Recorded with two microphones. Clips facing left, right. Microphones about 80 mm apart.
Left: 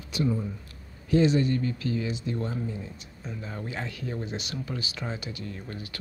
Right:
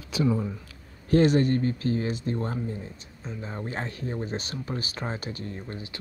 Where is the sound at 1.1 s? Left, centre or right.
Right.